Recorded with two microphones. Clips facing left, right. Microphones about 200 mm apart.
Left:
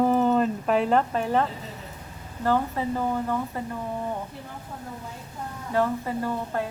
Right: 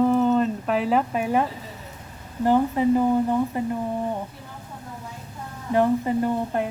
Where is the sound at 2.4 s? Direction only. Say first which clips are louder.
Right 6 dB; 15° right (ahead or behind).